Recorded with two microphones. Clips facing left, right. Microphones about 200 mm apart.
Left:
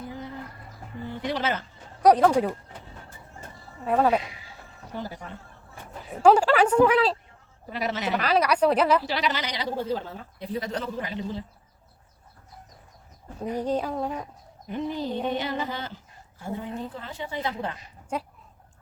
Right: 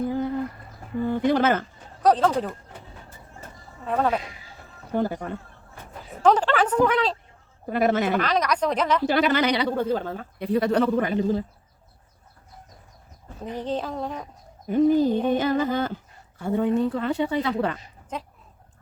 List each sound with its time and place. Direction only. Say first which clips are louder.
0.1 s a sound: right 11 dB; 50° right (ahead or behind)
1.0 s speech: right 8 dB; 50° right (ahead or behind)
2.0 s speech: left 2 dB; 15° left (ahead or behind)
3.8 s a woman's voice: left 2 dB; 10° left (ahead or behind)
4.9 s music: right 10 dB; 55° right (ahead or behind)
6.2 s a woman's voice: left 2 dB; 10° left (ahead or behind)
7.7 s music: right 7 dB; 50° right (ahead or behind)
8.2 s a woman's voice: left 2 dB; 10° left (ahead or behind)
9.0 s speech: right 8 dB; 50° right (ahead or behind)
13.4 s a woman's voice: left 2 dB; 10° left (ahead or behind)
14.7 s music: right 11 dB; 45° right (ahead or behind)
16.4 s a woman's voice: right 11 dB; 65° right (ahead or behind)
18.1 s a woman's voice: left 3 dB; 10° left (ahead or behind)